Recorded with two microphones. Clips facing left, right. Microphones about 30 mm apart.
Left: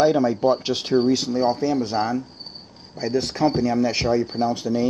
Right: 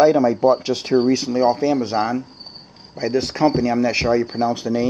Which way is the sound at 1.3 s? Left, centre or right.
Centre.